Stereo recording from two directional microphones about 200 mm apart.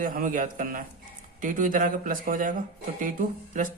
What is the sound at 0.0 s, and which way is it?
Speech, 45° right (ahead or behind).